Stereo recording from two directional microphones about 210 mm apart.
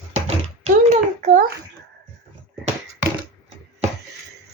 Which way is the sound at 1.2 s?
40° right (ahead or behind).